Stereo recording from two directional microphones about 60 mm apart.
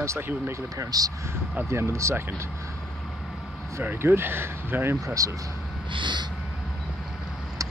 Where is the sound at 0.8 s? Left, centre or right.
Right.